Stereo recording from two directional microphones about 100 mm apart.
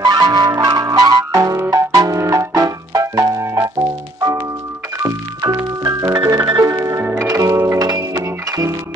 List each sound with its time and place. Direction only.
0.0 s music: 45° right (ahead or behind)
5.0 s music: 35° right (ahead or behind)